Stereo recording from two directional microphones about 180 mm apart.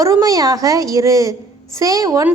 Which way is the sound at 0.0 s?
20° right (ahead or behind).